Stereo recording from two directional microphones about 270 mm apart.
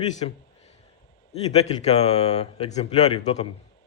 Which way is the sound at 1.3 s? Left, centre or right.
Left.